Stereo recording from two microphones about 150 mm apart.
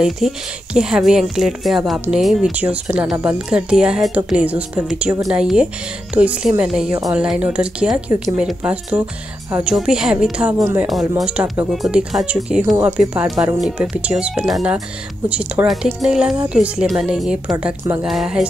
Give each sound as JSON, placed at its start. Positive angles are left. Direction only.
{"t": 0.2, "sound": "speech", "side_deg": 0}
{"t": 10.9, "sound": "speech", "side_deg": 0}